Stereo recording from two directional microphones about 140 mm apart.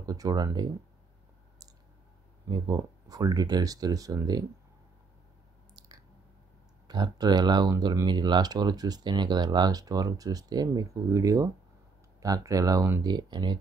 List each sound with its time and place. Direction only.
0.0 s speech: 25° right (ahead or behind)
2.4 s speech: 25° right (ahead or behind)
6.9 s speech: 30° right (ahead or behind)
13.1 s speech: 30° right (ahead or behind)